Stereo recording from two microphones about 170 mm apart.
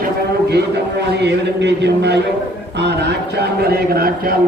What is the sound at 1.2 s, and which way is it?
A man's voice, 85° right.